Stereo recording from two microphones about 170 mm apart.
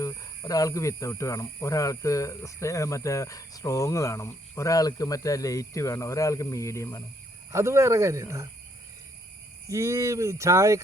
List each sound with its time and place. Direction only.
0.0 s speech: 20° left (ahead or behind)
7.5 s speech: 15° right (ahead or behind)
9.6 s speech: 20° right (ahead or behind)